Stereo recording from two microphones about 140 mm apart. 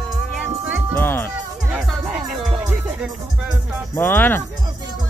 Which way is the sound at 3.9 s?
15° left (ahead or behind).